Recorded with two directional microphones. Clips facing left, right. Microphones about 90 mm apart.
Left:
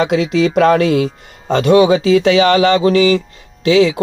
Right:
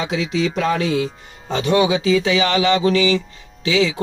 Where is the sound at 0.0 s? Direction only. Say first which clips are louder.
Left 7 dB; 60° left (ahead or behind); by 3.9 s 40° left (ahead or behind).